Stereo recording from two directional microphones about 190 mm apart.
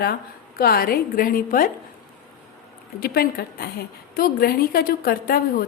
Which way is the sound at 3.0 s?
55° left (ahead or behind).